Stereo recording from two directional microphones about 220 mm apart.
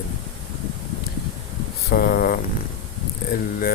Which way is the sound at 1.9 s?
40° left (ahead or behind).